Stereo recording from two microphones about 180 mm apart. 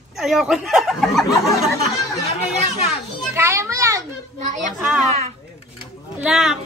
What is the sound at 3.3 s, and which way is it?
Children playing, 15° right (ahead or behind).